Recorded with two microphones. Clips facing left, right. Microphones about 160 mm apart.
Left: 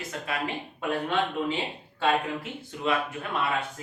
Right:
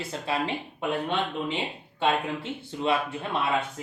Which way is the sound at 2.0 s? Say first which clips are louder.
Even; 30° right (ahead or behind).